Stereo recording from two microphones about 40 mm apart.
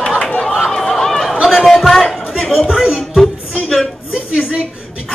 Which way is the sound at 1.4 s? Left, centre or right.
Centre.